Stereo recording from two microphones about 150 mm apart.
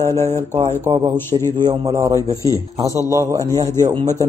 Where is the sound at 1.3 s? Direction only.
40° right (ahead or behind).